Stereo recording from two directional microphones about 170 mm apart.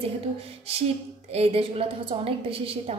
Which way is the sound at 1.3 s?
35° right (ahead or behind).